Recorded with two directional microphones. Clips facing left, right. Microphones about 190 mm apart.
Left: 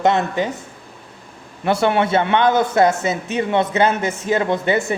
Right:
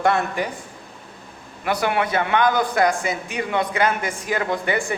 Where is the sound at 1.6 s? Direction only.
30° left (ahead or behind).